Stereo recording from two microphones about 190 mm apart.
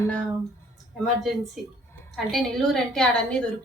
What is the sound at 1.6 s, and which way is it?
Speech, centre (ahead or behind).